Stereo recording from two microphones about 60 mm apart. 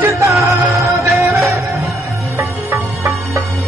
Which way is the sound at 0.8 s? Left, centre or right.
Right.